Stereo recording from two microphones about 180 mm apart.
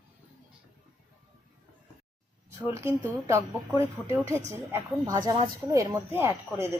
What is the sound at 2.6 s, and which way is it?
Speech, 15° right (ahead or behind).